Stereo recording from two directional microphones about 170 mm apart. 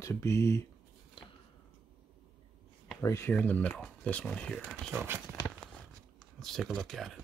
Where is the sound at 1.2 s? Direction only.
30° left (ahead or behind).